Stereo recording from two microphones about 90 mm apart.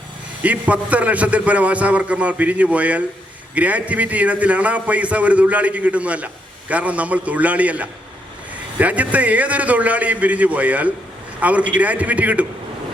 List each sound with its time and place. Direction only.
0.4 s a man's voice: 15° right (ahead or behind)